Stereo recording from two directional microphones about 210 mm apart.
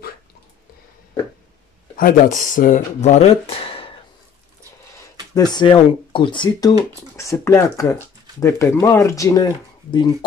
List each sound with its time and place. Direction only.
2.0 s speech: 40° left (ahead or behind)
5.3 s speech: 20° left (ahead or behind)